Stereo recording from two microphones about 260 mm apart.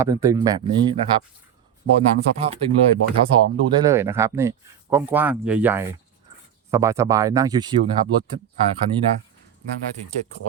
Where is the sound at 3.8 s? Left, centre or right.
Centre.